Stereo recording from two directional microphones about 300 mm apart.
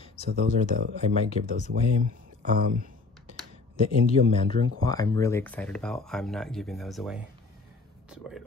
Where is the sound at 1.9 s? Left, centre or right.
Right.